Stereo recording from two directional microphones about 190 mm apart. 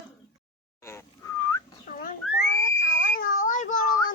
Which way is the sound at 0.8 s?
15° left (ahead or behind).